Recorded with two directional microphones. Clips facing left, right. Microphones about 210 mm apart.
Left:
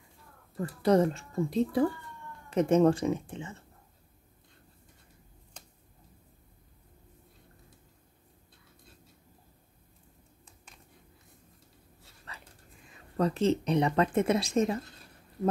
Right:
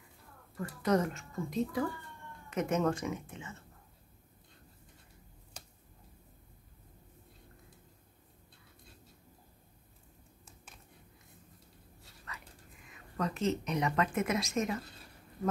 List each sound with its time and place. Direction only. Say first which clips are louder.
0.6 s speech: left 6 dB; 30° left (ahead or behind)
12.3 s dog: even; 30° left (ahead or behind)
12.8 s speech: left 7 dB; 30° left (ahead or behind)